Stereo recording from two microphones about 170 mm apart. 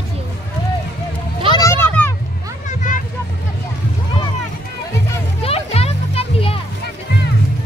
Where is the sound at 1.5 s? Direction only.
15° left (ahead or behind).